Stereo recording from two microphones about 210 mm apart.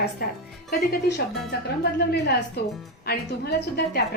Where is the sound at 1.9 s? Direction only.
50° left (ahead or behind).